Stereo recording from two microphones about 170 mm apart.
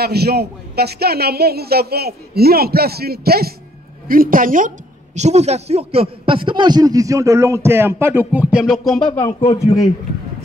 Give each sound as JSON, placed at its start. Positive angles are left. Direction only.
{"t": 0.0, "sound": "a man's voice", "side_deg": -70}
{"t": 4.1, "sound": "a woman's voice", "side_deg": -55}
{"t": 9.2, "sound": "speech", "side_deg": 15}